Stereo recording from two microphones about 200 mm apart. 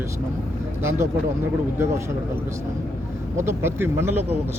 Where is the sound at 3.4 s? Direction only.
10° right (ahead or behind).